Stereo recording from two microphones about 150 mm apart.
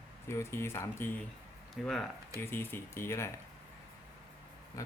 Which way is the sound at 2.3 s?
15° left (ahead or behind).